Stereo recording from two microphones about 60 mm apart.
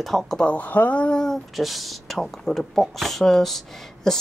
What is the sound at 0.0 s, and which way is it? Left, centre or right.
Speech, centre.